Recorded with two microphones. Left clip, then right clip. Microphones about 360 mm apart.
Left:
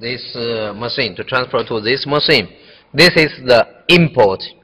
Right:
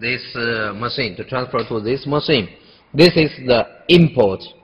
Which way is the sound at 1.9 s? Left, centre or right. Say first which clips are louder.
Left 5 dB; left.